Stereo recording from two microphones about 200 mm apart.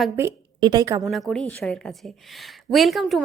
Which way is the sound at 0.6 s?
20° right (ahead or behind).